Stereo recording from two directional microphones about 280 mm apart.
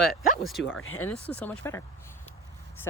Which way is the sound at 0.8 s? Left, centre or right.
Left.